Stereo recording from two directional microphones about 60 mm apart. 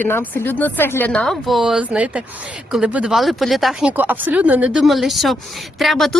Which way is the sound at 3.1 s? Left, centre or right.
Centre.